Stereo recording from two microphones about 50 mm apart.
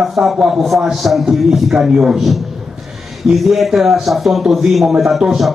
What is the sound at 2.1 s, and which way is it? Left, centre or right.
A man's voice, centre.